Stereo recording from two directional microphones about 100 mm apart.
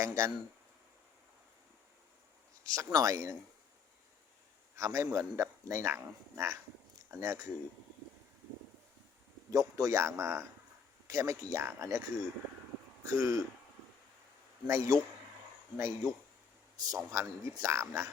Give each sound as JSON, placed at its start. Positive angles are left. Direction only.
{"t": 0.0, "sound": "speech", "side_deg": -30}
{"t": 2.6, "sound": "speech", "side_deg": -35}
{"t": 4.8, "sound": "speech", "side_deg": -30}
{"t": 9.5, "sound": "speech", "side_deg": -35}
{"t": 14.7, "sound": "speech", "side_deg": -30}